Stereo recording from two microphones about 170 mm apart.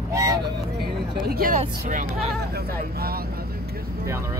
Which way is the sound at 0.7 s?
70° right (ahead or behind).